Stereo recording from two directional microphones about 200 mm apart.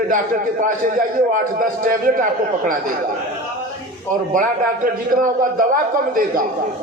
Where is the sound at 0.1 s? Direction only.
40° right (ahead or behind).